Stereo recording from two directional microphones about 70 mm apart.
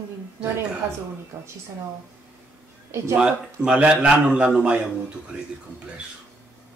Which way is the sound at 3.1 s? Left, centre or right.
Centre.